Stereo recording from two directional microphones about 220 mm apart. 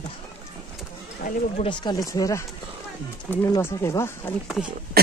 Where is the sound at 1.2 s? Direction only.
25° left (ahead or behind); by 4.3 s 10° left (ahead or behind).